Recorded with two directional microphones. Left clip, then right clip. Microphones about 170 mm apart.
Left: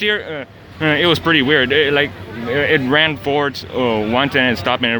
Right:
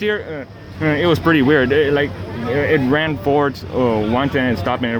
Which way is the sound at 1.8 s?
20° left (ahead or behind).